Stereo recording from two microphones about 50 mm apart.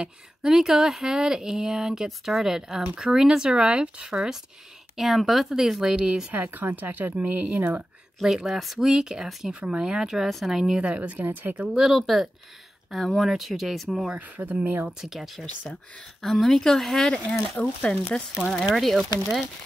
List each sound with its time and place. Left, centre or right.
0.0 s speech: centre
4.9 s speech: centre
6.3 s speech: right
8.2 s speech: centre
10.8 s speech: right
11.8 s speech: centre
14.2 s speech: right
15.0 s speech: centre
17.1 s speech: left
18.7 s speech: centre